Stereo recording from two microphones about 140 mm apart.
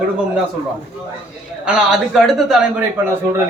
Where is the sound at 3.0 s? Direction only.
15° right (ahead or behind).